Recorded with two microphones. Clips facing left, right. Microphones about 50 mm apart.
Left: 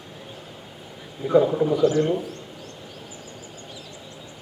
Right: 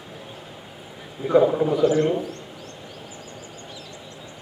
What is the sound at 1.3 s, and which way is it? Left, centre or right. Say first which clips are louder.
Speech: right 1 dB; centre.